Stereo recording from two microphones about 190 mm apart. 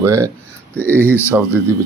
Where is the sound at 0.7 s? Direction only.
10° left (ahead or behind).